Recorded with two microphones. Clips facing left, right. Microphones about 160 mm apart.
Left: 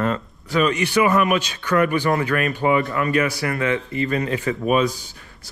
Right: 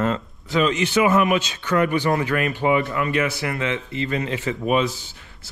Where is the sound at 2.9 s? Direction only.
40° left (ahead or behind).